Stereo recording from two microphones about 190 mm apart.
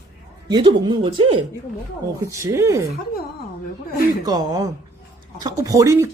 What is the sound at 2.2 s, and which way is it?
Speech, 15° right (ahead or behind).